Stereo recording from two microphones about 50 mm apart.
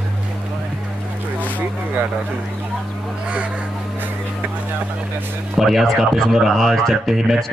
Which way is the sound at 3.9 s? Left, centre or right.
Right.